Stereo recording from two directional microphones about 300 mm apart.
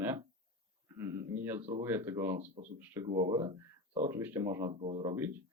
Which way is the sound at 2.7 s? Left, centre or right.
Centre.